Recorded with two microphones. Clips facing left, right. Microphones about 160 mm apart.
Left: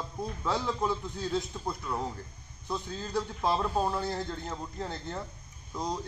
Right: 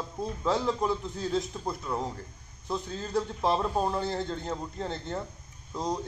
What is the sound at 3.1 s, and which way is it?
Speech, 20° right (ahead or behind).